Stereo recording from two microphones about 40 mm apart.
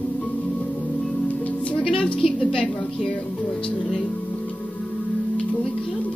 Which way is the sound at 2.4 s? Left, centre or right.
Left.